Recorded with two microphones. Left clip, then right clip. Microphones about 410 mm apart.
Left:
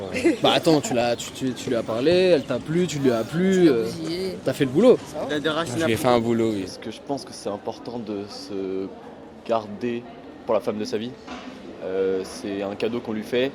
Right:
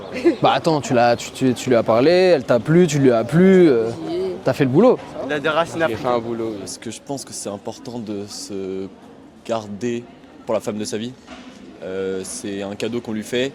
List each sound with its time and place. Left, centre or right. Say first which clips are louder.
0.1 s a sound: right 4 dB; left
0.4 s speech: even; centre
3.8 s speech: right 5 dB; left
4.4 s speech: right 2 dB; centre
5.3 s speech: right 6 dB; right
5.9 s speech: left 1 dB; left
6.8 s a man's voice: right 1 dB; right